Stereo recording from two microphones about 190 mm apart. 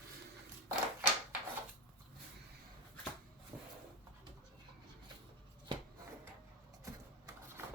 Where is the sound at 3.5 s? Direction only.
20° right (ahead or behind).